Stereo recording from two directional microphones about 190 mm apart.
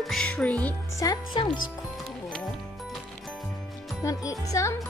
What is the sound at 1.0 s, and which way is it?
Speech, 20° left (ahead or behind).